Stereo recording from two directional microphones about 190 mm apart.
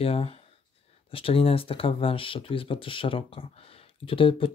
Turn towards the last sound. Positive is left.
turn(degrees=25)  # may be behind; listen again after turning